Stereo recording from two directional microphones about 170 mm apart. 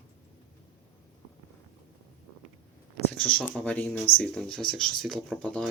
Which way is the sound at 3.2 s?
10° left (ahead or behind).